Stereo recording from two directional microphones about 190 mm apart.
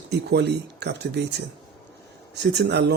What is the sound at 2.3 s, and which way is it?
Speech, 60° right (ahead or behind).